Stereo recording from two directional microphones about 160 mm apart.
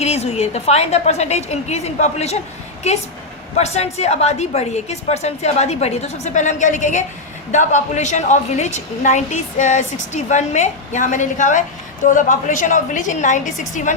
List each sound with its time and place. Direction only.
0.0 s a woman's voice: 40° left (ahead or behind)
3.6 s a woman's voice: 40° left (ahead or behind)